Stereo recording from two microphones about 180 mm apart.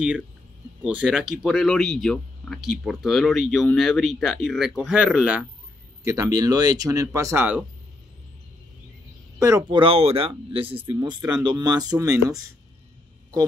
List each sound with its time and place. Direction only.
0.8 s speech: 5° right (ahead or behind)
6.0 s speech: 20° right (ahead or behind)
9.4 s speech: 20° right (ahead or behind)